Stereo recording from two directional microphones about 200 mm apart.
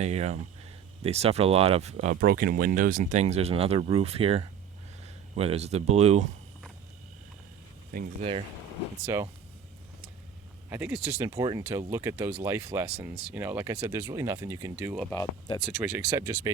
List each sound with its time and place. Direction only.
0.0 s speech: 35° right (ahead or behind)
2.2 s speech: 45° right (ahead or behind)
7.9 s speech: 45° right (ahead or behind)
9.1 s speech: 15° right (ahead or behind)
10.7 s speech: 10° right (ahead or behind)
15.1 s speech: 20° left (ahead or behind)
15.6 s speech: 5° right (ahead or behind)